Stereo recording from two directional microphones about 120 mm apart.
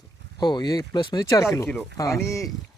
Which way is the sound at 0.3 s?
35° left (ahead or behind).